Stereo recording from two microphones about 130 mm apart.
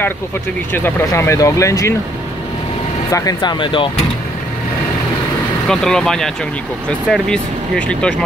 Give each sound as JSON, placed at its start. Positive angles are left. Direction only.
{"t": 0.7, "sound": "speech", "side_deg": 15}
{"t": 3.1, "sound": "speech", "side_deg": 25}
{"t": 5.7, "sound": "speech", "side_deg": 5}